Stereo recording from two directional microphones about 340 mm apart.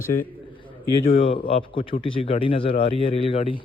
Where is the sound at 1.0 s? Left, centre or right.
Centre.